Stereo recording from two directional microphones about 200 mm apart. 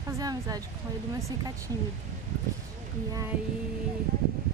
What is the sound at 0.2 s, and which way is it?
Speech, 20° right (ahead or behind).